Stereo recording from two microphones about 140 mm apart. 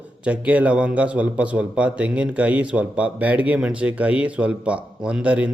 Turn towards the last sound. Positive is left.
turn(degrees=-10)  # may be behind; listen again after turning